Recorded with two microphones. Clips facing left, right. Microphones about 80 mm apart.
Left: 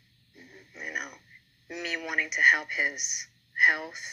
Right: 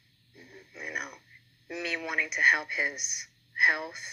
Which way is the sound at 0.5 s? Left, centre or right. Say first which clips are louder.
Left 1 dB; centre.